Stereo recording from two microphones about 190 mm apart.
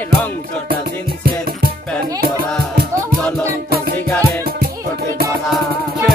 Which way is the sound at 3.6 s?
55° right (ahead or behind).